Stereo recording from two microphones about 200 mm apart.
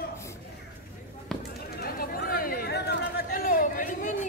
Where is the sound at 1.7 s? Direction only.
50° left (ahead or behind).